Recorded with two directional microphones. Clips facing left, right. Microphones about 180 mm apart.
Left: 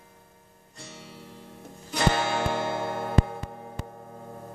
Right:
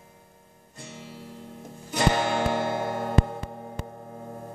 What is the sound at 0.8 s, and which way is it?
Music, 10° right (ahead or behind).